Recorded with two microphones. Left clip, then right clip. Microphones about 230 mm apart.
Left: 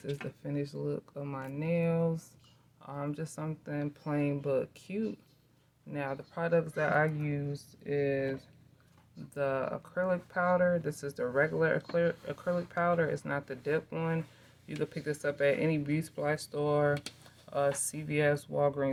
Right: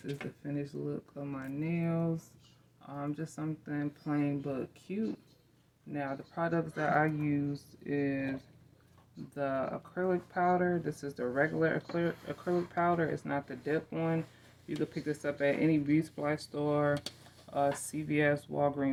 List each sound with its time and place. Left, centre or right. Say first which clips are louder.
0.5 s speech: left 3 dB; left
5.9 s speech: left 1 dB; left